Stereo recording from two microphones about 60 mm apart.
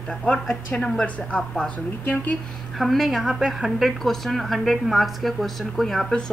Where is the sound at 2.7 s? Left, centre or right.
Centre.